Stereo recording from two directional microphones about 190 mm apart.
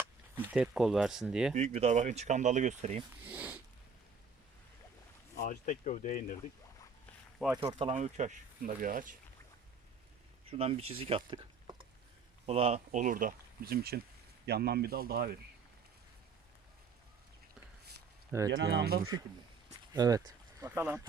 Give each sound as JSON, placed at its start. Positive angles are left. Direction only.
{"t": 0.3, "sound": "speech", "side_deg": -5}
{"t": 1.5, "sound": "speech", "side_deg": -35}
{"t": 3.2, "sound": "speech", "side_deg": -5}
{"t": 5.4, "sound": "speech", "side_deg": 45}
{"t": 7.3, "sound": "speech", "side_deg": -5}
{"t": 7.6, "sound": "speech", "side_deg": -30}
{"t": 10.5, "sound": "speech", "side_deg": -30}
{"t": 18.3, "sound": "speech", "side_deg": -15}
{"t": 18.5, "sound": "speech", "side_deg": -65}
{"t": 19.9, "sound": "speech", "side_deg": -20}